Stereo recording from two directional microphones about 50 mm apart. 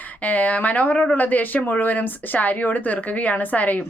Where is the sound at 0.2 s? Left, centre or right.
Left.